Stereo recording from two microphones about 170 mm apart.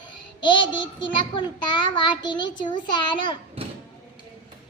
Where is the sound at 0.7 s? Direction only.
90° left.